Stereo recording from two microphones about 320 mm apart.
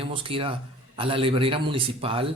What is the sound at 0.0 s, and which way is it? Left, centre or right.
Speech, centre.